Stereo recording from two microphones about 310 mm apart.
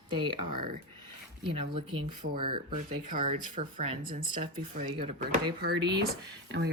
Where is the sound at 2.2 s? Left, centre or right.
Right; by 6.0 s centre.